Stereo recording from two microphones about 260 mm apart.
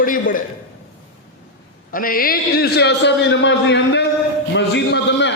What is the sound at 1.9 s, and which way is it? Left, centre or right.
A man's voice, left.